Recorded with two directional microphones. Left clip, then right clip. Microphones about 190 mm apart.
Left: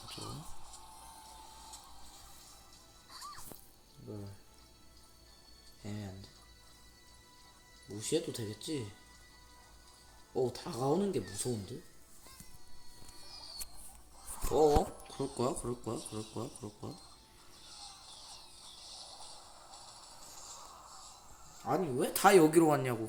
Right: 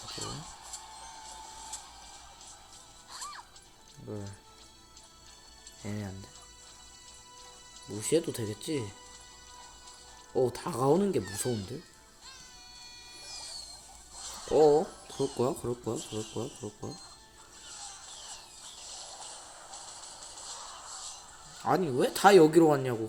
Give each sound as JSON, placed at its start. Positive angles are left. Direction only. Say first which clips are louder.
{"t": 0.0, "sound": "music", "louder": "right 6 dB", "side_deg": -30}
{"t": 3.1, "sound": "music", "louder": "right 5 dB", "side_deg": -25}
{"t": 5.8, "sound": "speech", "louder": "right 6 dB", "side_deg": -20}
{"t": 8.0, "sound": "speech", "louder": "right 6 dB", "side_deg": -15}
{"t": 10.3, "sound": "speech", "louder": "right 6 dB", "side_deg": -15}
{"t": 11.5, "sound": "speech", "louder": "right 5 dB", "side_deg": -25}
{"t": 13.2, "sound": "rodents", "louder": "right 6 dB", "side_deg": -30}
{"t": 14.2, "sound": "a sound", "louder": "right 5 dB", "side_deg": -45}
{"t": 15.4, "sound": "speech", "louder": "right 2 dB", "side_deg": -10}
{"t": 16.0, "sound": "speech", "louder": "right 5 dB", "side_deg": -30}
{"t": 17.7, "sound": "vehicle", "louder": "right 5 dB", "side_deg": -30}
{"t": 18.8, "sound": "a sound", "louder": "right 5 dB", "side_deg": -30}
{"t": 21.7, "sound": "speech", "louder": "right 6 dB", "side_deg": -10}